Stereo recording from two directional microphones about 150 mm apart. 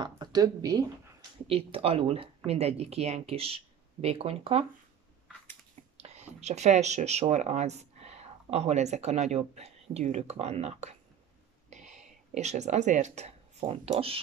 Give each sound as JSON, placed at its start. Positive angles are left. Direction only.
{"t": 0.0, "sound": "speech", "side_deg": -25}
{"t": 1.5, "sound": "speech", "side_deg": -40}
{"t": 6.0, "sound": "speech", "side_deg": -50}